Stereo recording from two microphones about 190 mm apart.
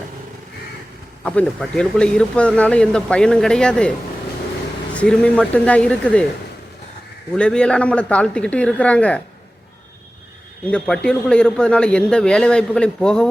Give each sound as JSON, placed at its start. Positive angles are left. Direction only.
{"t": 1.2, "sound": "a man's voice", "side_deg": 5}
{"t": 4.9, "sound": "speech", "side_deg": 5}
{"t": 7.3, "sound": "a man's voice", "side_deg": 5}
{"t": 10.7, "sound": "a man's voice", "side_deg": 5}